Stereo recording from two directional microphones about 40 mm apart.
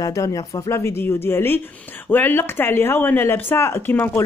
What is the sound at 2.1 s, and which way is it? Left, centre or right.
Speech, left.